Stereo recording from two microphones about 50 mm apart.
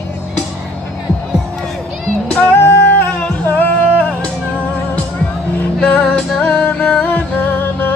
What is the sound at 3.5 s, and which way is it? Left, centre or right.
Music, left.